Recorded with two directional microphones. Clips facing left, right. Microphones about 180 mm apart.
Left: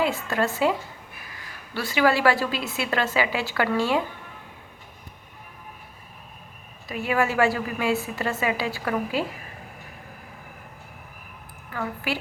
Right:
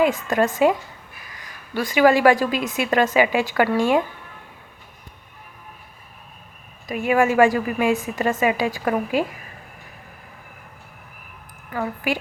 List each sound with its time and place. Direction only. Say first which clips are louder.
0.0 s a woman's voice: right 5 dB; 15° right (ahead or behind)
6.8 s a woman's voice: right 5 dB; 15° right (ahead or behind)
11.7 s a woman's voice: right 5 dB; 15° right (ahead or behind)